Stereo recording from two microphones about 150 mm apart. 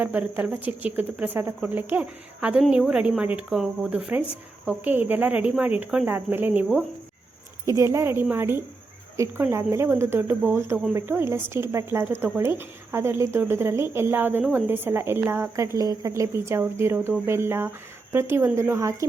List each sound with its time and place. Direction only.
0.0 s a woman's voice: 10° right (ahead or behind)